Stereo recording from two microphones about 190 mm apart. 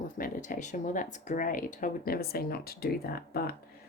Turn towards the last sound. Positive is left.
turn(degrees=50)  # may be behind; listen again after turning